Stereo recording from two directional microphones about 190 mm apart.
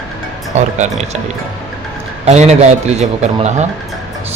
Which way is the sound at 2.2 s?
35° right (ahead or behind).